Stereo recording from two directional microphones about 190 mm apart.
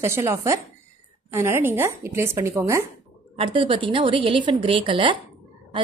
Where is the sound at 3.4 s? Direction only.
25° right (ahead or behind).